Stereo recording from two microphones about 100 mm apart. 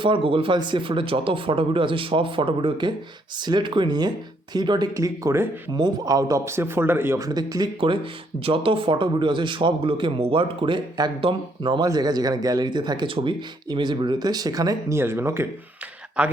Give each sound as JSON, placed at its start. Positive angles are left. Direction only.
{"t": 0.0, "sound": "speech", "side_deg": -65}
{"t": 4.9, "sound": "speech", "side_deg": -35}
{"t": 5.7, "sound": "a man's voice", "side_deg": -40}
{"t": 7.2, "sound": "speech", "side_deg": -40}
{"t": 8.4, "sound": "speech", "side_deg": -65}
{"t": 11.9, "sound": "speech", "side_deg": -40}
{"t": 14.9, "sound": "a man's voice", "side_deg": -25}
{"t": 16.2, "sound": "speech", "side_deg": -15}